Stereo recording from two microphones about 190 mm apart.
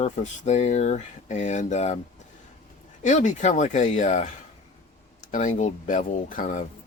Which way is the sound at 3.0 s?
40° left (ahead or behind).